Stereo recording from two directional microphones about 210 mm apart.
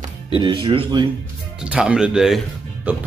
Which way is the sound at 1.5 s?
5° right (ahead or behind).